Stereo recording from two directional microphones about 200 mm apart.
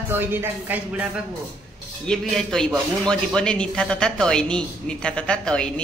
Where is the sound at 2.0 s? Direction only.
5° left (ahead or behind).